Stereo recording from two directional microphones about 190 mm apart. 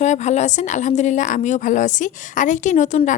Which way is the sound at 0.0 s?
40° left (ahead or behind).